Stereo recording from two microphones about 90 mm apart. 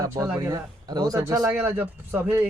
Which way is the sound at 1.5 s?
20° right (ahead or behind).